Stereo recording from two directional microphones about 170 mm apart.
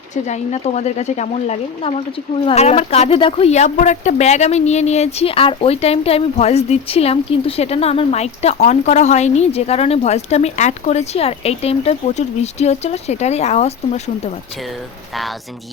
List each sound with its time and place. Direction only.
0.1 s speech: 40° left (ahead or behind)